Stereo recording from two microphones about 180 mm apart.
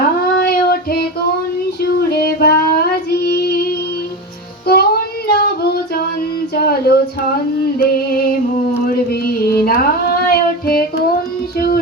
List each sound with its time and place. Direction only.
0.3 s child singing: 55° left (ahead or behind)
4.6 s music: 60° left (ahead or behind)
5.3 s female singing: 60° left (ahead or behind)
6.5 s a sound: 60° left (ahead or behind)
7.8 s female singing: 55° left (ahead or behind)
9.0 s music: 55° left (ahead or behind)